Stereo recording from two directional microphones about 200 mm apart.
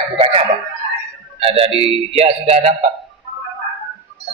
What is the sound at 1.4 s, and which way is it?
Speech, 30° right (ahead or behind).